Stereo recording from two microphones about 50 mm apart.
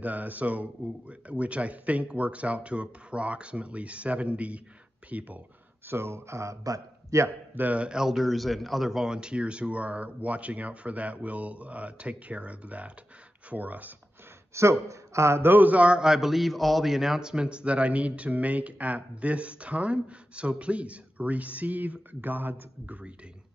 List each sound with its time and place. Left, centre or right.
0.0 s a man's voice: right
5.9 s a man's voice: right
7.5 s a man's voice: right
7.9 s a man's voice: centre; by 13.9 s right
14.5 s speech: right
15.5 s a man's voice: right